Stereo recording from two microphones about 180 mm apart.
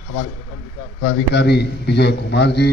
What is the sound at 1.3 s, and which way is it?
A man's voice, 65° left (ahead or behind).